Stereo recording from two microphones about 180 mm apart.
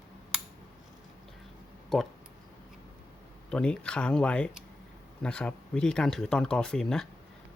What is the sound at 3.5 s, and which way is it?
Speech, 5° left (ahead or behind).